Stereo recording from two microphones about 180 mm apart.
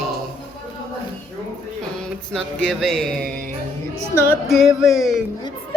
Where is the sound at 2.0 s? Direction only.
5° left (ahead or behind).